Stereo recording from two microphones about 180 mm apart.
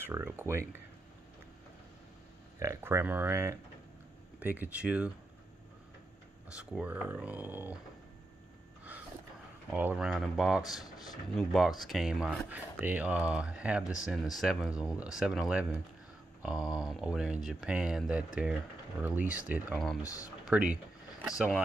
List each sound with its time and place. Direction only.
0.0 s speech: 10° right (ahead or behind)
2.6 s speech: 15° right (ahead or behind)
6.5 s speech: 5° right (ahead or behind)
9.7 s speech: 5° right (ahead or behind)
20.0 s speech: 20° left (ahead or behind)
20.4 s speech: 5° right (ahead or behind)